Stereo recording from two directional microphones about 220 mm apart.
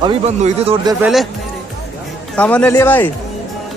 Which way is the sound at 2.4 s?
5° left (ahead or behind).